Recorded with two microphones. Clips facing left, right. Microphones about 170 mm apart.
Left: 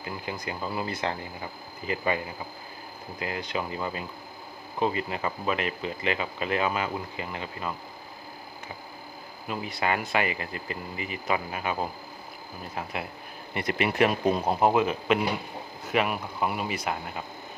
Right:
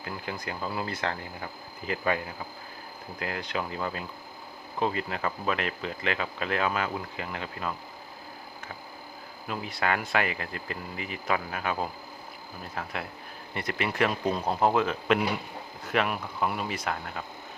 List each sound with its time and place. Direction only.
0.0 s speech: 5° left (ahead or behind)
9.5 s speech: 5° left (ahead or behind)